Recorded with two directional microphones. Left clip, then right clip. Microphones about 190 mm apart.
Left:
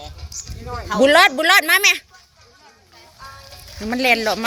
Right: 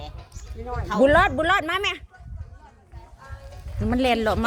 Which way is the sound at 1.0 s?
15° left (ahead or behind).